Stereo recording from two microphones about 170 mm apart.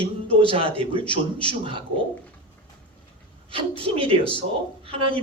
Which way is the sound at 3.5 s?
30° right (ahead or behind).